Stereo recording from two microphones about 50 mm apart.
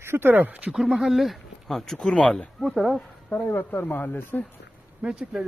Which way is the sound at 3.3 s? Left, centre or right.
Left.